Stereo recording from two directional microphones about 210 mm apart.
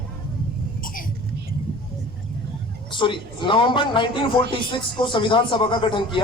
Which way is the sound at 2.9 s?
20° left (ahead or behind).